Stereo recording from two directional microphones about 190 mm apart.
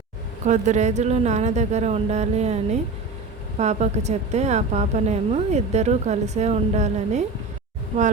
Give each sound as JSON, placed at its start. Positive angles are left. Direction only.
{"t": 0.4, "sound": "a woman's voice", "side_deg": -40}